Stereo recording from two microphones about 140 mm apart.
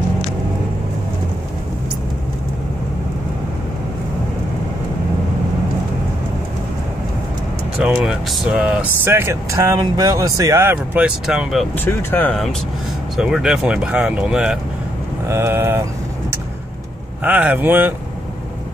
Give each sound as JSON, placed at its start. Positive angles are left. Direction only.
{"t": 7.8, "sound": "speech", "side_deg": -5}
{"t": 11.7, "sound": "speech", "side_deg": 15}
{"t": 13.1, "sound": "speech", "side_deg": -5}
{"t": 15.2, "sound": "speech", "side_deg": -20}
{"t": 17.2, "sound": "speech", "side_deg": -10}